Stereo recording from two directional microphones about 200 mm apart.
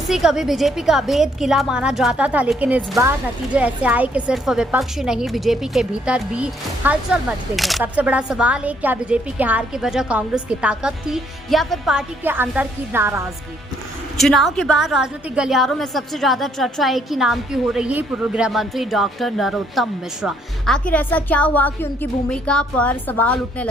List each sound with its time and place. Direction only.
0.1 s a woman's voice: centre (ahead or behind)
14.2 s a woman's voice: centre (ahead or behind)